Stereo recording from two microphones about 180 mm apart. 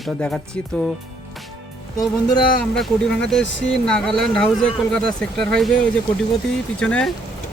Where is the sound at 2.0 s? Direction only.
20° left (ahead or behind).